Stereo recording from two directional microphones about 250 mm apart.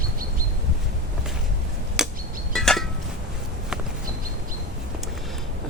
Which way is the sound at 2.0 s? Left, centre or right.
Centre.